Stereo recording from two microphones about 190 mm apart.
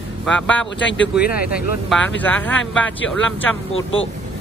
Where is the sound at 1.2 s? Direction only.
50° left (ahead or behind).